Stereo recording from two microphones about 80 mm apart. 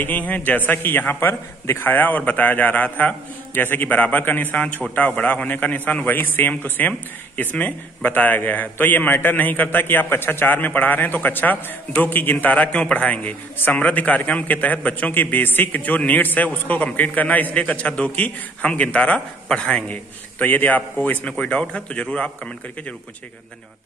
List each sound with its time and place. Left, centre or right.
0.0 s a man's voice: left